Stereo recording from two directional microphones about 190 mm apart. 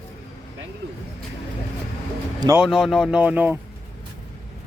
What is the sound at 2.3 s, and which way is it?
Speech, 20° right (ahead or behind).